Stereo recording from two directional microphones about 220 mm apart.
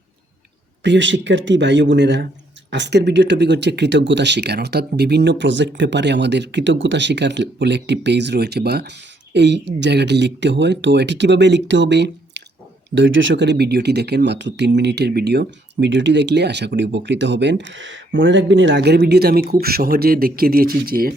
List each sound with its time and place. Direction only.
0.8 s speech: 55° right (ahead or behind)